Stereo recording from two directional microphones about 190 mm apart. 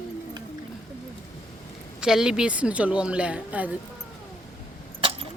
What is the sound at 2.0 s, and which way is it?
A woman's voice, 5° right (ahead or behind).